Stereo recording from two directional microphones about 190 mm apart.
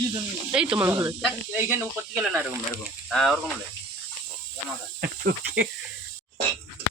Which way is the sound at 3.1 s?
Centre (ahead or behind).